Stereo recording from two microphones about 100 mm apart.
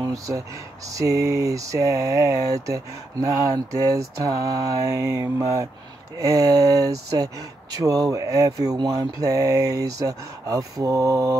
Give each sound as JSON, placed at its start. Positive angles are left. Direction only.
{"t": 0.0, "sound": "speech", "side_deg": -35}